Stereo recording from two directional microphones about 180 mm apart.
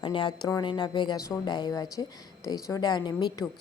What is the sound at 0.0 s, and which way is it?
Speech, 25° left (ahead or behind).